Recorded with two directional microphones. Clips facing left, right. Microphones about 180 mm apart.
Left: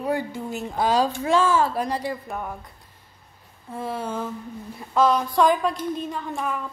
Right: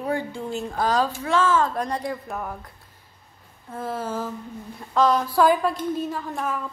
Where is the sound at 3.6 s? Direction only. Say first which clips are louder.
Even; centre (ahead or behind).